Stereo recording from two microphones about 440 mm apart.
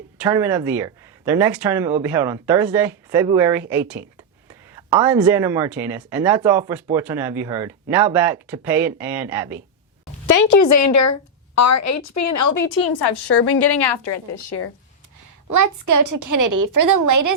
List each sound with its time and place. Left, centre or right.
0.2 s speech: centre
10.2 s a woman's voice: left
15.4 s a woman's voice: right